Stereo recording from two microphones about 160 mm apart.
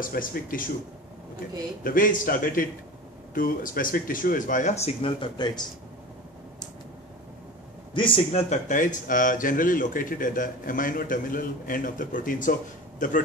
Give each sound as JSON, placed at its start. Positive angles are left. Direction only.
{"t": 0.0, "sound": "speech", "side_deg": 60}
{"t": 1.8, "sound": "speech", "side_deg": 60}
{"t": 7.9, "sound": "a man's voice", "side_deg": 30}
{"t": 8.3, "sound": "speech", "side_deg": 50}